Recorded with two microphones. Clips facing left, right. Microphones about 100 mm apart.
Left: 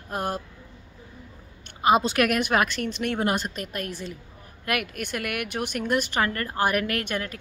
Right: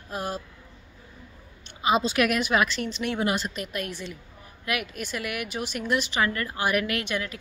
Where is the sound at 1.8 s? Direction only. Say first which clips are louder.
Left 2 dB; 50° left (ahead or behind).